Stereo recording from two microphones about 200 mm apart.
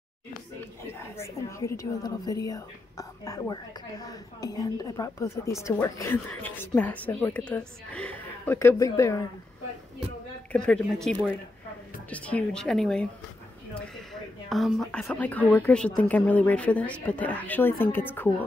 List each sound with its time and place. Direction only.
0.9 s speech: 15° left (ahead or behind)
10.5 s a woman's voice: 5° left (ahead or behind)
14.5 s speech: centre (ahead or behind)